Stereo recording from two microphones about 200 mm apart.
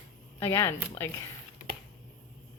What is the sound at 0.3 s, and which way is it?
Speech, 15° left (ahead or behind).